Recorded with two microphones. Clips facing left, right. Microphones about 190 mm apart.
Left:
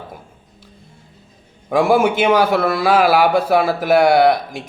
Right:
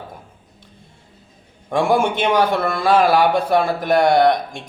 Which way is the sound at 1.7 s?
5° left (ahead or behind).